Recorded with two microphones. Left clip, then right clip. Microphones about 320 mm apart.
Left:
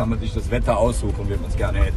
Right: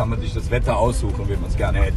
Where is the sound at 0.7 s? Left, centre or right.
Centre.